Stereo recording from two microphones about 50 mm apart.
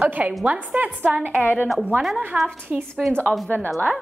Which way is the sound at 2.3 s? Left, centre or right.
Right.